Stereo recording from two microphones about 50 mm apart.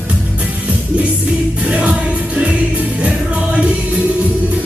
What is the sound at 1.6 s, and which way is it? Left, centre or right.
Music, right.